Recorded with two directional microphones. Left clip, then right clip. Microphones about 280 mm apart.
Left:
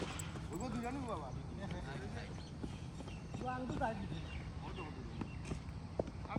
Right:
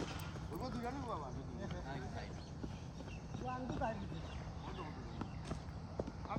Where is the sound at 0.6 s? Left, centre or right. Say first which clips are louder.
Left 1 dB; left.